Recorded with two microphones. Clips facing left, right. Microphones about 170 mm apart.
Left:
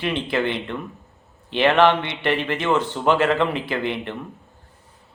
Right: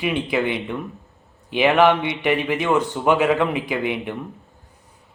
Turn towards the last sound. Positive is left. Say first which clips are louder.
# right 1 dB
turn(degrees=-5)  # may be behind; listen again after turning